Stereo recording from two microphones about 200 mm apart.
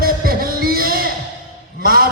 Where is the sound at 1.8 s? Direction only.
50° right (ahead or behind).